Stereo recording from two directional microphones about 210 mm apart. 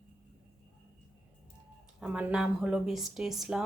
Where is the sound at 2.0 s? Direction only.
5° right (ahead or behind).